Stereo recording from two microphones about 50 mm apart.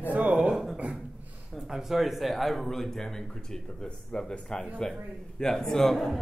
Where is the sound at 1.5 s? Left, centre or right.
Centre.